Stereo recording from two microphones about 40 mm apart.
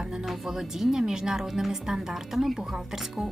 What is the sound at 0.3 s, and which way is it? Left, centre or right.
Speech, centre.